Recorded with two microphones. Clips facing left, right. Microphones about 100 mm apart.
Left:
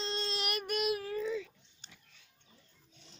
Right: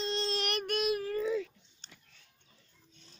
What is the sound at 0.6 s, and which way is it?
Child singing, centre (ahead or behind).